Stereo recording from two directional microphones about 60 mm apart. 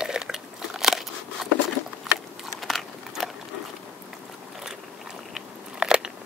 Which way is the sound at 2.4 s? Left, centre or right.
Centre.